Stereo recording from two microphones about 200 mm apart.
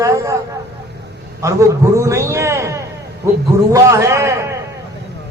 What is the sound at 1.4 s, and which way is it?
A man's voice, 15° right (ahead or behind).